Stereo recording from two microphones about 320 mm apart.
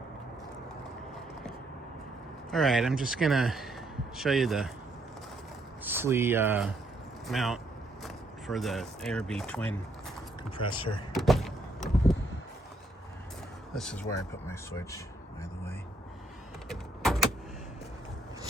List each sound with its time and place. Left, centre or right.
2.5 s a man's voice: centre
5.8 s speech: centre
10.6 s speech: centre
11.1 s power windows: centre
13.7 s speech: centre
16.6 s power windows: centre